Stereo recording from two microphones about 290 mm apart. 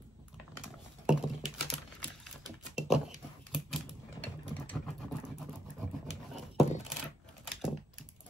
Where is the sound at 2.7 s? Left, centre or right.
Centre.